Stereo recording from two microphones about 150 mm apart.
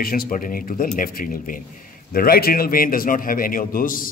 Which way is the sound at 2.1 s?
80° left.